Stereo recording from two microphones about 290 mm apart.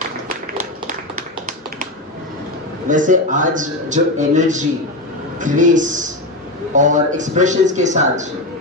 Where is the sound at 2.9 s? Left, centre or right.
Right.